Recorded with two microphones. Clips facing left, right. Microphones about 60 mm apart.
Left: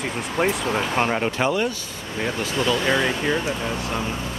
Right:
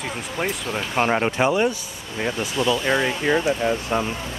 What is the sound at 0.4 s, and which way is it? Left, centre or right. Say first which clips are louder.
Speech: left 4 dB; centre.